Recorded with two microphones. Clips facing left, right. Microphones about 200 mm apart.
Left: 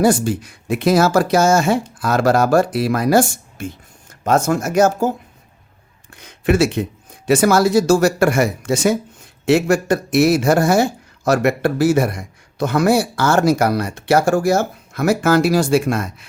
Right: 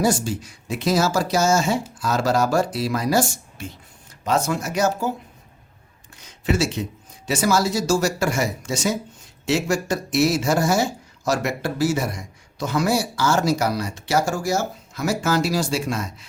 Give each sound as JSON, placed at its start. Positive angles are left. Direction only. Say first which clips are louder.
{"t": 0.0, "sound": "speech", "louder": "left 6 dB", "side_deg": 55}
{"t": 6.1, "sound": "speech", "louder": "left 6 dB", "side_deg": 60}